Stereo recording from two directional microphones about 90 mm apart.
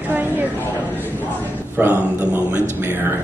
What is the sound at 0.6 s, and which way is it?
A man's voice, 20° left (ahead or behind).